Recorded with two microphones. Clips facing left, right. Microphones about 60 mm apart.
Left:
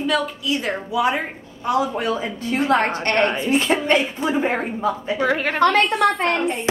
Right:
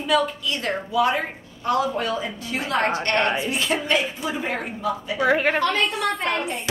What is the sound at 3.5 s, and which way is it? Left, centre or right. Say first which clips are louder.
Speech: left 5 dB; left.